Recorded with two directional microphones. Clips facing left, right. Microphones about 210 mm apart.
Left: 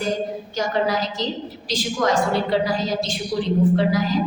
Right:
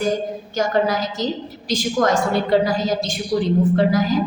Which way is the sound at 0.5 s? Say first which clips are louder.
Right 3 dB; 50° right (ahead or behind).